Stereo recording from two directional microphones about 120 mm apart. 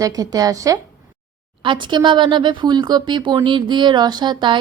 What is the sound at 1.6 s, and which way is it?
Speech, 40° right (ahead or behind).